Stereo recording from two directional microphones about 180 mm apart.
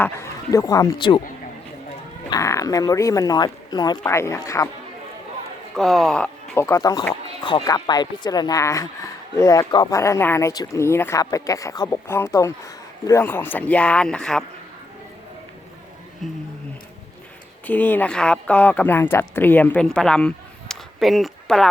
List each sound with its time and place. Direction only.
0.0 s speech: 15° left (ahead or behind)
2.3 s speech: 15° left (ahead or behind)
5.7 s speech: centre (ahead or behind)
16.2 s speech: centre (ahead or behind)
17.7 s speech: 10° left (ahead or behind)